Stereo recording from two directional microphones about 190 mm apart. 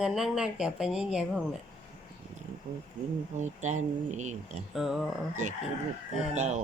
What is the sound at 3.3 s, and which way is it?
Speech, 40° right (ahead or behind).